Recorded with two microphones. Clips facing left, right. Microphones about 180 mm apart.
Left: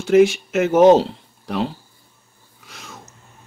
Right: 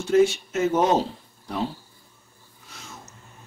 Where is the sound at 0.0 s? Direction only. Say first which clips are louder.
Left 5 dB; 90° left.